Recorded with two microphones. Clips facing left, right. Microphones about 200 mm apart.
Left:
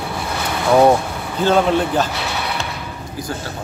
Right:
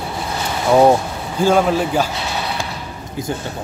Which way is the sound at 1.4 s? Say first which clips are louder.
Right 1 dB; 10° right (ahead or behind).